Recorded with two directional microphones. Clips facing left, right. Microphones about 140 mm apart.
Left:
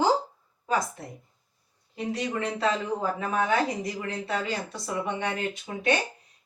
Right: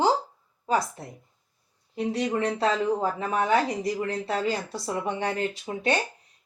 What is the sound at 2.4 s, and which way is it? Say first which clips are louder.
Speech: right 3 dB; 35° right (ahead or behind).